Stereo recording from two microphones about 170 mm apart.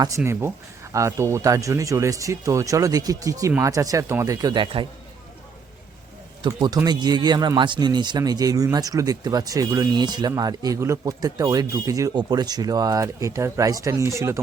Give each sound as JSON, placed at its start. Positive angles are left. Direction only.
{"t": 0.2, "sound": "speech", "side_deg": -15}
{"t": 6.4, "sound": "speech", "side_deg": -25}